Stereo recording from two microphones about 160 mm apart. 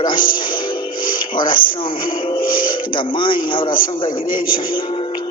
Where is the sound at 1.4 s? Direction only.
30° left (ahead or behind).